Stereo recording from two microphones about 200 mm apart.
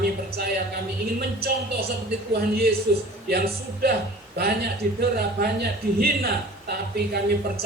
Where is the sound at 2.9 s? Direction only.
55° right (ahead or behind).